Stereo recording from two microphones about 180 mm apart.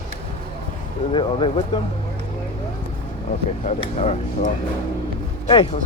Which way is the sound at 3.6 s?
40° left (ahead or behind).